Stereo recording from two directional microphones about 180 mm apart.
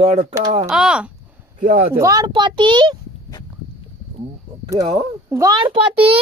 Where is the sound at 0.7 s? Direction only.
5° right (ahead or behind).